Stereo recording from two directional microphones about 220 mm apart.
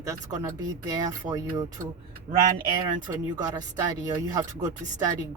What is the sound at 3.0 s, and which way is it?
Speech, 15° right (ahead or behind).